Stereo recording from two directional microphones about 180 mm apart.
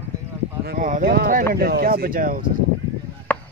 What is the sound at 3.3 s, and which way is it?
Chop, 10° left (ahead or behind).